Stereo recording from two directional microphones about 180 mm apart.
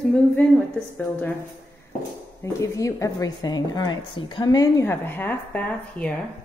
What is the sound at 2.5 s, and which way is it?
A woman's voice, 15° left (ahead or behind).